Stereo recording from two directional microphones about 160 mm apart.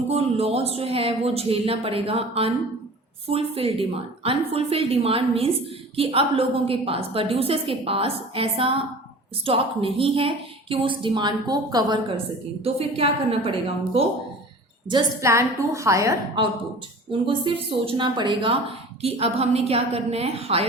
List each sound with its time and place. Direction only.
0.1 s a woman's voice: 40° right (ahead or behind)
12.6 s a woman's voice: 35° right (ahead or behind)
15.2 s a woman's voice: 20° right (ahead or behind)
17.1 s a woman's voice: 35° right (ahead or behind)